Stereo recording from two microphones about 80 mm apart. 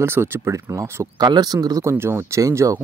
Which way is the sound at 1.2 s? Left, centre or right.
Right.